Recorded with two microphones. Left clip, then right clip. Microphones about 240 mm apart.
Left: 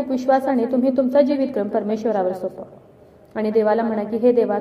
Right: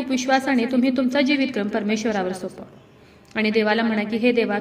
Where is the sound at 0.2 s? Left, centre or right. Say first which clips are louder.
Left 2 dB; right.